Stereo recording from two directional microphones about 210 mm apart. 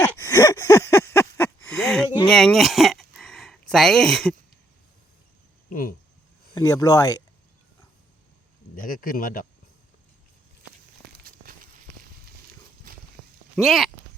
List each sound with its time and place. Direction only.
0.0 s gasp: 15° left (ahead or behind)
2.2 s a sound: centre (ahead or behind)
5.6 s speech: 40° left (ahead or behind)
6.5 s speech: 15° left (ahead or behind)
8.7 s speech: 40° left (ahead or behind)
11.2 s a sound: 45° right (ahead or behind)
13.6 s speech: centre (ahead or behind)